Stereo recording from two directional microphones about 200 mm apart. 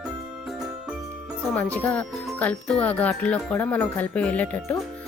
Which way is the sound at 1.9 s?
5° left (ahead or behind).